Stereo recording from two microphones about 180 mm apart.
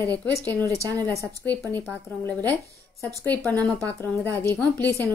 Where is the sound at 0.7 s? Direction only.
20° right (ahead or behind).